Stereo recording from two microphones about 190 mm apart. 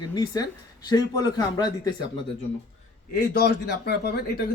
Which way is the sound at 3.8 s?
60° left (ahead or behind).